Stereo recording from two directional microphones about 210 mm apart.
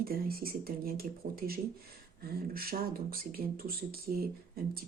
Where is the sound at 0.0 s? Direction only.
45° right (ahead or behind).